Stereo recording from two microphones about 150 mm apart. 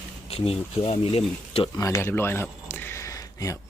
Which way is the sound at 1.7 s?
20° left (ahead or behind).